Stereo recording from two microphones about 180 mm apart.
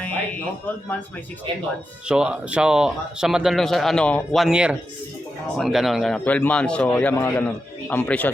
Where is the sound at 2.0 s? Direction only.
5° right (ahead or behind).